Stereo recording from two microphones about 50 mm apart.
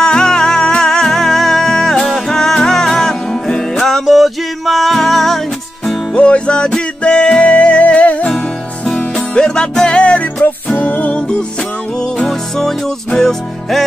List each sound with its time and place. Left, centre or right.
0.0 s music: centre
6.1 s music: left
8.3 s music: centre
12.3 s music: centre